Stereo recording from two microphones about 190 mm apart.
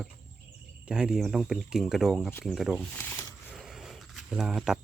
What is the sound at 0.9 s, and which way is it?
Speech, 5° right (ahead or behind).